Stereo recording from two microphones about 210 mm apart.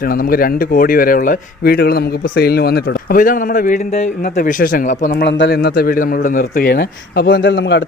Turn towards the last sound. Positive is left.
turn(degrees=55)  # may be behind; listen again after turning